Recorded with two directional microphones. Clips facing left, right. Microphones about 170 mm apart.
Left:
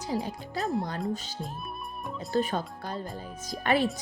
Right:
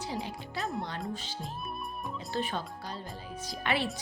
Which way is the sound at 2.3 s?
45° left (ahead or behind).